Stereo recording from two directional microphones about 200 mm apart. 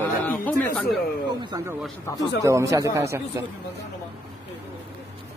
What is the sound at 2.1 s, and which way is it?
Speech, 15° left (ahead or behind).